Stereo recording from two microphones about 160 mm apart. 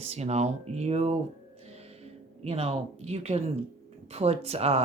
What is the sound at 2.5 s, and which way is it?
Speech, 40° right (ahead or behind).